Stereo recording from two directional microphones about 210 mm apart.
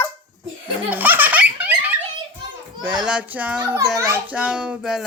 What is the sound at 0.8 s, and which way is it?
Baby laughter, 10° right (ahead or behind).